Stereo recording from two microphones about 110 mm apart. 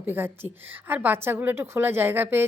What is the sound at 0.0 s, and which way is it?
Speech, 20° right (ahead or behind).